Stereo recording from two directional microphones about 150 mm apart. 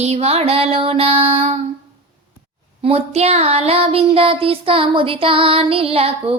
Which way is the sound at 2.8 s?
40° right (ahead or behind).